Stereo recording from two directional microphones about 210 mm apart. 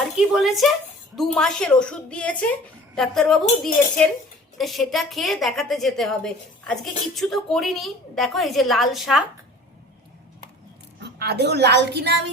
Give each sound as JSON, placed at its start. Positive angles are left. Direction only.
{"t": 0.3, "sound": "a woman's voice", "side_deg": 0}
{"t": 11.2, "sound": "a woman's voice", "side_deg": -50}